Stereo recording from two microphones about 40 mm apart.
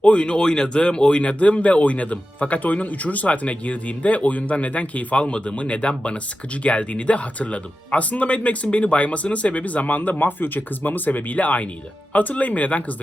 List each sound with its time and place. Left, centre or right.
0.0 s speech: left